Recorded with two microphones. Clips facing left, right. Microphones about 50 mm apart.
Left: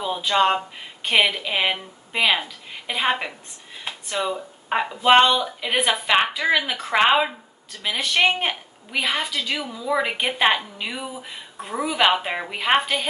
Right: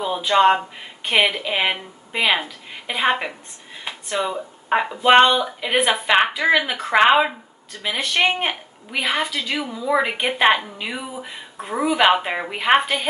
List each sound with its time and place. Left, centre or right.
0.3 s speech: centre
11.5 s a sound: right
11.8 s speech: centre